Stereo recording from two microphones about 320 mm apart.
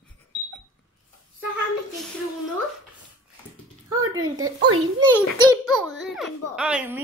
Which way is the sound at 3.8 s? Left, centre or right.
Right.